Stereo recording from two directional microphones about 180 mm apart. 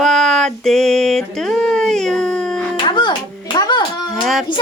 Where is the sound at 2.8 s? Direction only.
25° left (ahead or behind).